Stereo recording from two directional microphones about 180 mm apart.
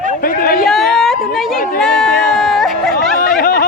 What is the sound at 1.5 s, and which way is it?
Speech, 50° left (ahead or behind).